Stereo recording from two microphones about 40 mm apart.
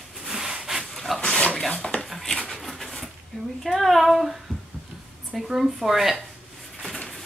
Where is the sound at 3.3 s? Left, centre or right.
Centre.